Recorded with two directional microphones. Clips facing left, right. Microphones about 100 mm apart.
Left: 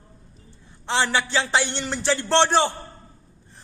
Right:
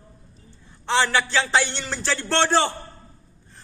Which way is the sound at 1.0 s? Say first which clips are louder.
Right 1 dB; 15° left (ahead or behind).